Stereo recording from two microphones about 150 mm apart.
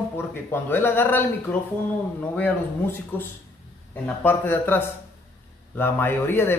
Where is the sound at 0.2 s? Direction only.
15° left (ahead or behind).